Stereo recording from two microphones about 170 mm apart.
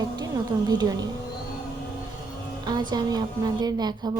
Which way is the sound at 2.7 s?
25° right (ahead or behind).